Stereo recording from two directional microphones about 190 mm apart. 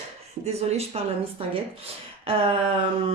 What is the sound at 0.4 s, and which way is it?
Speech, 35° right (ahead or behind).